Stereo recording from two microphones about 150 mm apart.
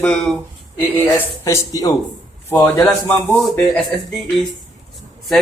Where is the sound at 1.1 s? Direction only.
20° left (ahead or behind).